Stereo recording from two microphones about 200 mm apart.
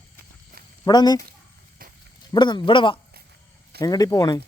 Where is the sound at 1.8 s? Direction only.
45° right (ahead or behind).